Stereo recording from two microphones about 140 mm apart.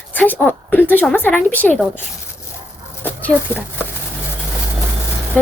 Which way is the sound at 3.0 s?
15° left (ahead or behind).